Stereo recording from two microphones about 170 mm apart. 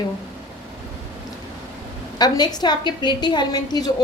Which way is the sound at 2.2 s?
25° left (ahead or behind).